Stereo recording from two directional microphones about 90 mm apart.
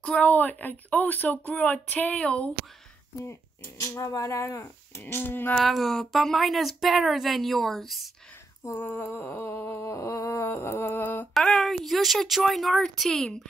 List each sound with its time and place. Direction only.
0.0 s a woman's voice: 15° left (ahead or behind)
3.3 s speech: 30° left (ahead or behind)
5.0 s a sound: 20° left (ahead or behind)
5.6 s a woman's voice: centre (ahead or behind)
8.7 s a sound: 20° left (ahead or behind)
11.3 s a woman's voice: 5° left (ahead or behind)